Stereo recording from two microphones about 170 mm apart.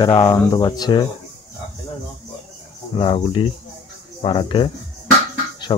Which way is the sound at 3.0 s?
30° left (ahead or behind).